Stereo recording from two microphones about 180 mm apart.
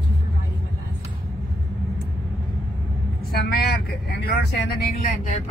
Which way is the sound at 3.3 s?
55° left (ahead or behind).